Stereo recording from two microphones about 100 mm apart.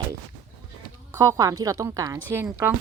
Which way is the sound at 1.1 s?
30° right (ahead or behind).